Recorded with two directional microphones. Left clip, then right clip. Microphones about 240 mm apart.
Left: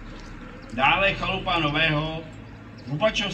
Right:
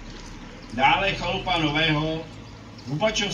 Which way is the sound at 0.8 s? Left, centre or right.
Centre.